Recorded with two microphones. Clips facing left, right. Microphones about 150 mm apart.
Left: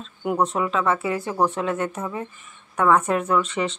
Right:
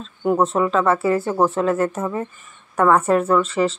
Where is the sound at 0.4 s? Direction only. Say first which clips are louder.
Right 3 dB; centre (ahead or behind).